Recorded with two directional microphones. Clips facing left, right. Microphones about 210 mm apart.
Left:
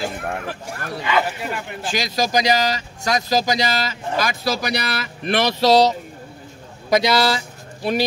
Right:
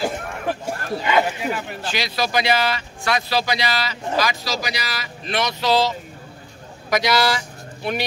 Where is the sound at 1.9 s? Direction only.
45° left (ahead or behind).